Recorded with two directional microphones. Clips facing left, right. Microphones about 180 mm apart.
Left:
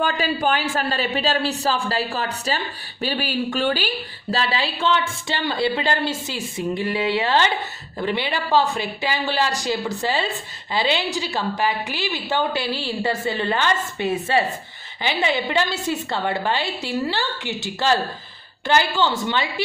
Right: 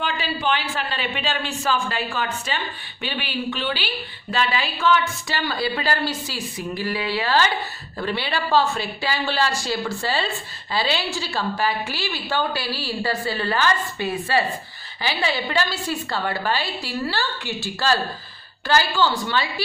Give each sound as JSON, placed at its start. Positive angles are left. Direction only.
{"t": 0.0, "sound": "a man's voice", "side_deg": 45}